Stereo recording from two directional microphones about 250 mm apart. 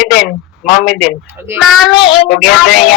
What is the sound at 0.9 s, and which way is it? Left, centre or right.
Speech, left.